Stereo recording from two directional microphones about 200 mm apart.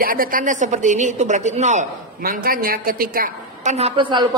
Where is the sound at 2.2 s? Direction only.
45° right (ahead or behind).